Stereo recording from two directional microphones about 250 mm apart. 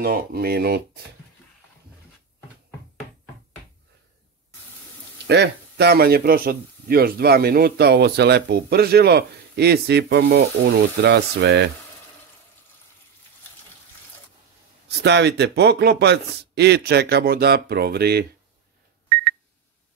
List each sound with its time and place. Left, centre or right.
0.0 s a man's voice: right
5.2 s a man's voice: right
14.9 s a man's voice: right